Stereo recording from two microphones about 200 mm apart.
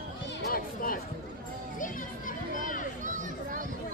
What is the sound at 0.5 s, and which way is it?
Chatter, 45° left (ahead or behind).